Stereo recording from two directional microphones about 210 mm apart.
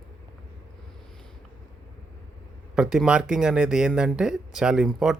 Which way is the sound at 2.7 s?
5° right (ahead or behind).